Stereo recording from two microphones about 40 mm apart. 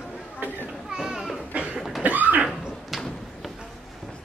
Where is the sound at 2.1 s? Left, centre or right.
Right.